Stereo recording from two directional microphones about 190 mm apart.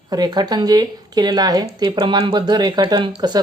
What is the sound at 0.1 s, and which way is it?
A woman's voice, 20° right (ahead or behind).